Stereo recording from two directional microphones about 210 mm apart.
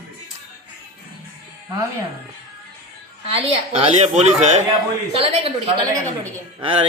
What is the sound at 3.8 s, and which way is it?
Speech, 30° right (ahead or behind).